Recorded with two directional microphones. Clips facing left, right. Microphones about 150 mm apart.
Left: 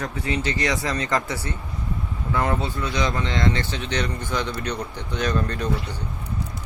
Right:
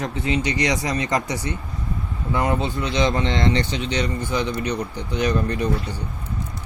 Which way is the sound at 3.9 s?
10° right (ahead or behind).